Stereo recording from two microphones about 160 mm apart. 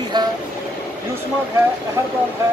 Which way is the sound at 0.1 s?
25° right (ahead or behind).